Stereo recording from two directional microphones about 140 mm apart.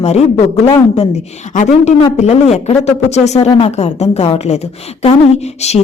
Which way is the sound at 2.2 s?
50° left (ahead or behind).